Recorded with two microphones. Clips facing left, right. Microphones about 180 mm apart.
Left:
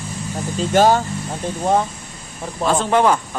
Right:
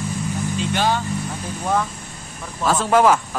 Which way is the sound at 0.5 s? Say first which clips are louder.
Left 8 dB; 45° left (ahead or behind).